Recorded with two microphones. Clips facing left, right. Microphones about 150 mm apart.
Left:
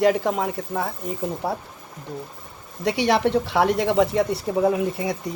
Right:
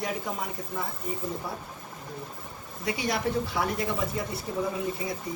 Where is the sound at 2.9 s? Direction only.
85° left.